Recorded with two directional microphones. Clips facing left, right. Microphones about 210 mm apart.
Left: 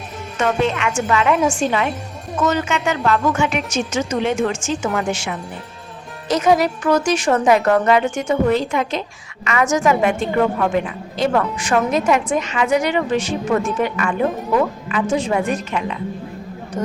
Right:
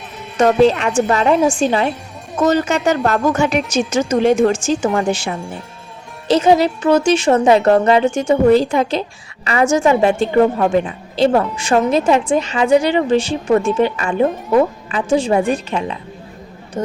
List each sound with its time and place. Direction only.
0.3 s speech: 35° right (ahead or behind)